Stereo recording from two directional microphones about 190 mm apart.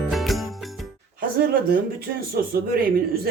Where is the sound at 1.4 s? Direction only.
50° right (ahead or behind).